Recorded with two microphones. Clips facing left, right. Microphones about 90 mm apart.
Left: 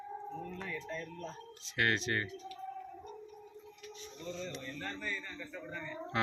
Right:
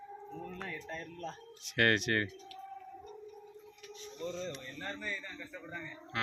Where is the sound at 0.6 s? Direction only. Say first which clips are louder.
Left 1 dB; 50° right (ahead or behind).